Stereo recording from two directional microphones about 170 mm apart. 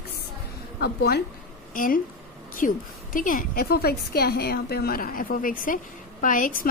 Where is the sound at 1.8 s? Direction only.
55° left (ahead or behind).